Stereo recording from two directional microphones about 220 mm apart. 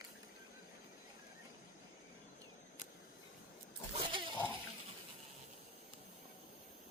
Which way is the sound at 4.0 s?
25° right (ahead or behind).